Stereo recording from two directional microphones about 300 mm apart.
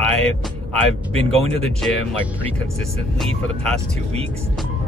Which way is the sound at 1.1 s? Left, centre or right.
Centre.